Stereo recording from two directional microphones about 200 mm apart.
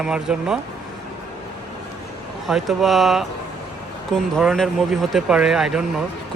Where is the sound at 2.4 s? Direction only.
Centre (ahead or behind).